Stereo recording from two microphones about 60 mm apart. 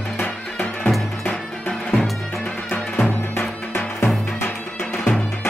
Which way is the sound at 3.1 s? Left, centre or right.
Left.